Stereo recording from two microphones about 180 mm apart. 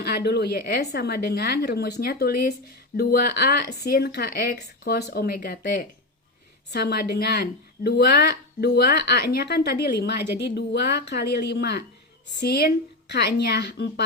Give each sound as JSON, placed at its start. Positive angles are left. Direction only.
{"t": 0.0, "sound": "speech", "side_deg": 60}
{"t": 6.7, "sound": "a woman's voice", "side_deg": 65}